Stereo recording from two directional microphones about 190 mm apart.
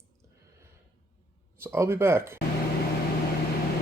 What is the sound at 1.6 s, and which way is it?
Speech, 15° right (ahead or behind).